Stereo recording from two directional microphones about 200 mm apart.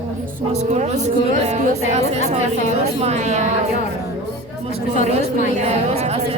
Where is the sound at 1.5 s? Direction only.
35° right (ahead or behind).